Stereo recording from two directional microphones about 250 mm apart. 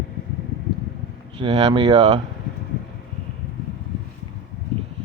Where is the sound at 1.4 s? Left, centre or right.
Centre.